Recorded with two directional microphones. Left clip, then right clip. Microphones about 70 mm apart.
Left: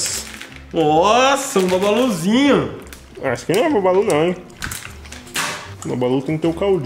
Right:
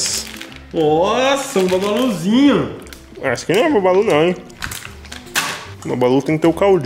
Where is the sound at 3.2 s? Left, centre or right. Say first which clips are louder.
Right 2 dB; centre.